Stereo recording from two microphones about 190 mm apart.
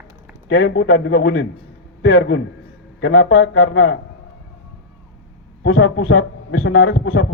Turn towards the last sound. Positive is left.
turn(degrees=90)